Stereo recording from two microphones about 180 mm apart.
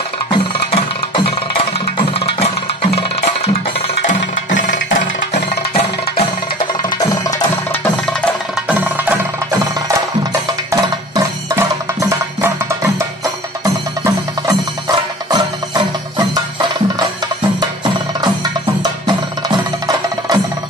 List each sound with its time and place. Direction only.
4.6 s music: 45° left (ahead or behind)
6.1 s music: 25° left (ahead or behind)
8.6 s music: 10° right (ahead or behind)